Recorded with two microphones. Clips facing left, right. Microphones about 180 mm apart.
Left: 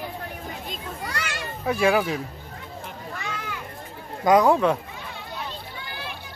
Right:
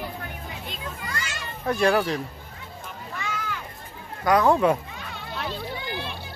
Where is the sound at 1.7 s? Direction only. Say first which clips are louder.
Even; 5° left (ahead or behind).